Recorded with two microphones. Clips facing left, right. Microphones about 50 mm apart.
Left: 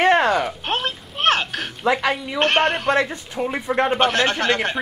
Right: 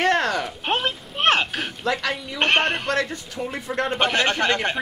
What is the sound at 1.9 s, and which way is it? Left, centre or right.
Speech, left.